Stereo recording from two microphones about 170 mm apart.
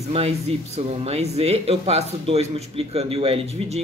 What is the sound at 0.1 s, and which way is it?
Speech, 35° right (ahead or behind).